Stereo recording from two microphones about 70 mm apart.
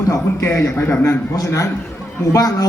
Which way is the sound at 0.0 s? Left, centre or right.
Left.